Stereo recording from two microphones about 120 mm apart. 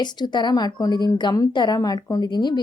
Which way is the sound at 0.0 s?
35° left (ahead or behind).